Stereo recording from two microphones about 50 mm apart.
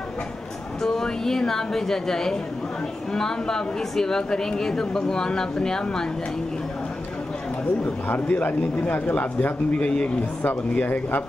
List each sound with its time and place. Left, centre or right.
0.8 s a woman's voice: centre
7.8 s speech: left